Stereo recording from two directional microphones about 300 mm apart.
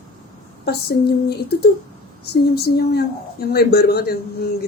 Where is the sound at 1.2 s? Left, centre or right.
Left.